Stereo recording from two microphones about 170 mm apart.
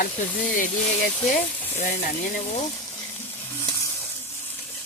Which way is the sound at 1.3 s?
45° left (ahead or behind).